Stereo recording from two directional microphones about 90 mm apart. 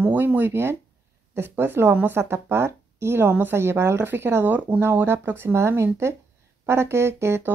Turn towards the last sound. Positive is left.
turn(degrees=-30)  # may be behind; listen again after turning